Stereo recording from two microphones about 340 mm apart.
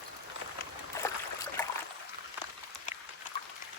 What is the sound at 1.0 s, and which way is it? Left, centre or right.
Stream, centre.